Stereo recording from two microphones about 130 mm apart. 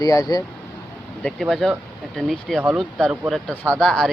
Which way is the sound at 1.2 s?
Centre (ahead or behind).